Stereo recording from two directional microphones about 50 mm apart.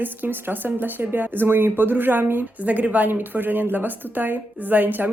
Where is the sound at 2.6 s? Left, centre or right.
Right.